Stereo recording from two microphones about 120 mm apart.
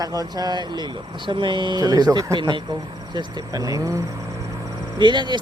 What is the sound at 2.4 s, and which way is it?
Speech, 40° right (ahead or behind).